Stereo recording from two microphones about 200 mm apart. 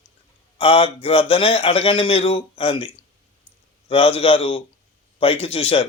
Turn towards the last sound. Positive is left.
turn(degrees=30)  # may be behind; listen again after turning